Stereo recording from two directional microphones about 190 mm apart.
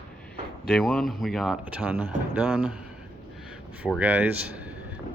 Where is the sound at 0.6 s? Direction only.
Centre (ahead or behind).